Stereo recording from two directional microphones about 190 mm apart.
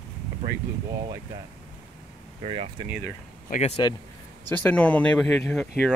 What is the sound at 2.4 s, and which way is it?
Speech, 30° right (ahead or behind).